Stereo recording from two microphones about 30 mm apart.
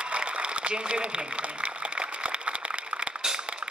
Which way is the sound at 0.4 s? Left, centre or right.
Right.